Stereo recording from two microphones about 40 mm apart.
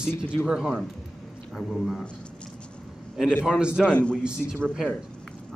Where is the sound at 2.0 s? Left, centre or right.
Left.